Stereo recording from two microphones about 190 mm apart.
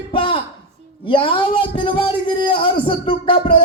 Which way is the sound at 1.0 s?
25° left (ahead or behind).